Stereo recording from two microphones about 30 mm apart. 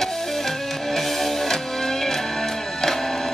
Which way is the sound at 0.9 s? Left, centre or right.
Centre.